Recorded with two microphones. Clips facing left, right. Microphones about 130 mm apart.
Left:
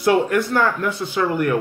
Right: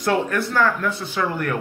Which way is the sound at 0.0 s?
15° left (ahead or behind).